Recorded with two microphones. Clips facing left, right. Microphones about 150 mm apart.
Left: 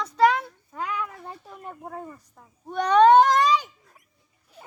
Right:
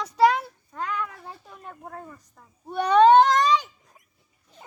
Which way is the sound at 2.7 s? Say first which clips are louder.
Even; 10° right (ahead or behind).